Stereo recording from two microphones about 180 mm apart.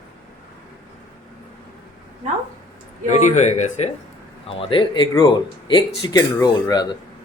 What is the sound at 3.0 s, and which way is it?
Speech, 40° left (ahead or behind).